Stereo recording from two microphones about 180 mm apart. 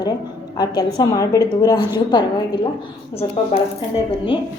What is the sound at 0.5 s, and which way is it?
A woman's voice, 20° left (ahead or behind).